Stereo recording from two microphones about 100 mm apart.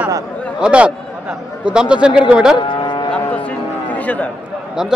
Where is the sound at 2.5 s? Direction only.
50° left (ahead or behind).